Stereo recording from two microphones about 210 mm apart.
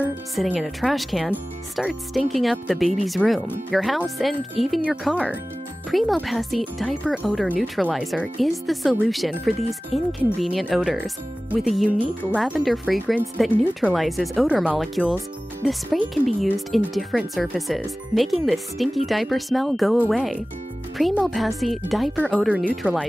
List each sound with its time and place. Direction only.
0.0 s speech: 5° right (ahead or behind)
12.2 s speech: 10° left (ahead or behind)